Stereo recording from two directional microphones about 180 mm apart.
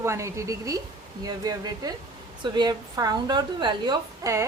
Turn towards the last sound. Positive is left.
turn(degrees=-20)  # may be behind; listen again after turning